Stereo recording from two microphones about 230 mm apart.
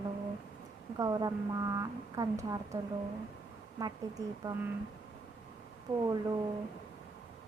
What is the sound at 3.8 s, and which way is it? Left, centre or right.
Speech, centre.